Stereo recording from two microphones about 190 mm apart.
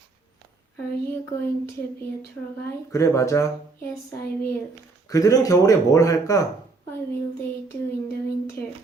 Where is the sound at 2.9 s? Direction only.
15° left (ahead or behind).